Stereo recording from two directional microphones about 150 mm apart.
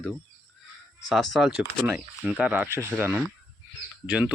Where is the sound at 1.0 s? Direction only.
Centre (ahead or behind).